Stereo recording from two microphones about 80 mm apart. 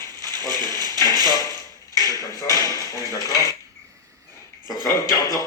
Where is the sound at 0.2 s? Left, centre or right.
Left.